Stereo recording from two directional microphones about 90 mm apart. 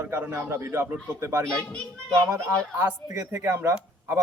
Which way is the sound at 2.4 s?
35° right (ahead or behind).